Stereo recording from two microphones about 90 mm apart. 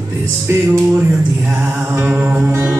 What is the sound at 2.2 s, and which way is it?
Music, 15° right (ahead or behind).